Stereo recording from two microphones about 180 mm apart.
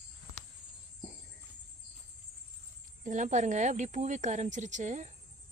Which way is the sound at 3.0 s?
45° right (ahead or behind).